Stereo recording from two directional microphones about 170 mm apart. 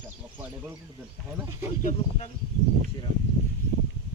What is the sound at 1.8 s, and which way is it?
Speech, 50° left (ahead or behind).